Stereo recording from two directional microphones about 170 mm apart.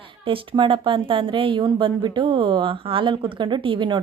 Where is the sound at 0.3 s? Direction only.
30° right (ahead or behind).